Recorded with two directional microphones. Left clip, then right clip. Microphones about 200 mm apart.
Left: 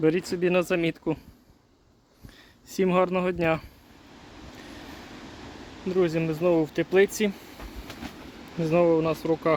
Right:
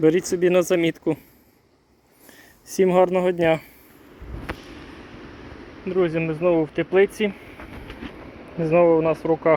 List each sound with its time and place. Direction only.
0.0 s speech: centre (ahead or behind)
2.6 s speech: 5° left (ahead or behind)
5.9 s speech: 20° left (ahead or behind)
8.6 s speech: 20° left (ahead or behind)